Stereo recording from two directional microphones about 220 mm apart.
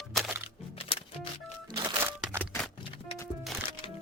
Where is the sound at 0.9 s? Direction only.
25° left (ahead or behind).